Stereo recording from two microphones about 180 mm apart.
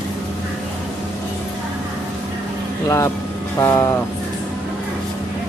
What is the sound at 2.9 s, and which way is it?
Speech, 15° left (ahead or behind).